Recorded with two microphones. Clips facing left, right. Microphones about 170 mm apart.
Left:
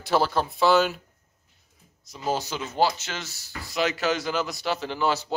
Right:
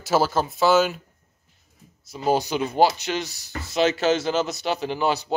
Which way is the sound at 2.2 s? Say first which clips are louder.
Right 6 dB; 15° right (ahead or behind).